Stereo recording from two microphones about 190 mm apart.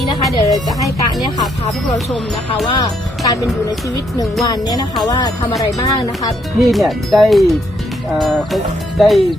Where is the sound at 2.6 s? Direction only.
20° left (ahead or behind).